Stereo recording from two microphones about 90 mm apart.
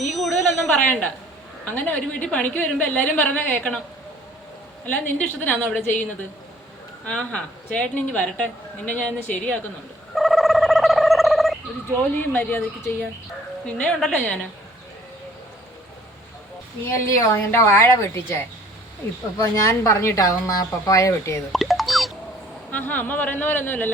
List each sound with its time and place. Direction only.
0.1 s a sound: centre (ahead or behind)
0.8 s a woman's voice: 10° left (ahead or behind)
4.9 s a woman's voice: 20° left (ahead or behind)
10.2 s a sound: centre (ahead or behind)
12.3 s a woman's voice: 20° left (ahead or behind)
16.8 s a woman's voice: 30° left (ahead or behind)
19.4 s speech: 35° left (ahead or behind)
21.5 s a sound: centre (ahead or behind)
22.7 s a woman's voice: 20° left (ahead or behind)